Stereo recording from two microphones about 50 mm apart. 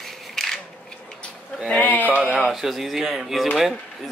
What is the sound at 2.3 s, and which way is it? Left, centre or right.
Speech, centre.